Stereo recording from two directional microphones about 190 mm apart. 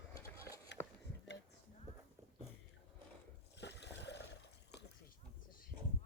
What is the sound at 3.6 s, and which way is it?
Boat, 65° left (ahead or behind).